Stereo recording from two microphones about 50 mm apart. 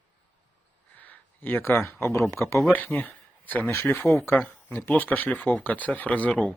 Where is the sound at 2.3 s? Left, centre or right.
Left.